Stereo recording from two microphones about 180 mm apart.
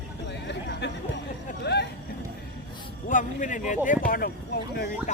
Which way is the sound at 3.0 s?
45° left (ahead or behind).